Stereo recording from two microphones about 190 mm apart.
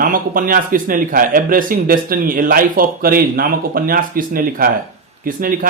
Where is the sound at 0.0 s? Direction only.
45° right (ahead or behind).